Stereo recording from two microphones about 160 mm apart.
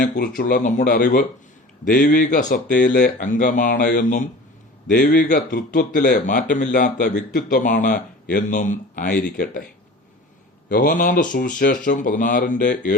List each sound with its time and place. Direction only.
0.0 s speech: 70° left (ahead or behind); by 3.8 s 50° left (ahead or behind)
3.8 s speech: 85° left
4.9 s speech: 55° left (ahead or behind)
9.1 s speech: 90° left
10.7 s speech: 60° left (ahead or behind)